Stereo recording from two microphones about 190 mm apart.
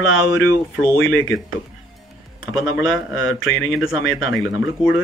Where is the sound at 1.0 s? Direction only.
90° left.